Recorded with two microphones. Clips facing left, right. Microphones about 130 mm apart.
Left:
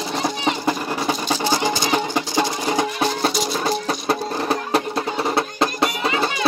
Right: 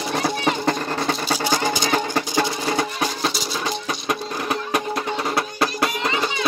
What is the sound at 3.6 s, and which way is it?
Music, 35° left (ahead or behind).